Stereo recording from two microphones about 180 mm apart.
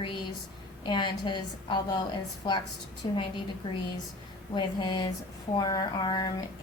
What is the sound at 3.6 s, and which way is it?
A woman's voice, 25° left (ahead or behind).